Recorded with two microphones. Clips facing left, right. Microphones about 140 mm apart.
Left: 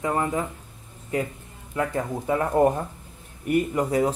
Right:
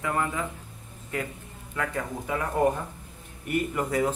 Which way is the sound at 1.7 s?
30° left (ahead or behind).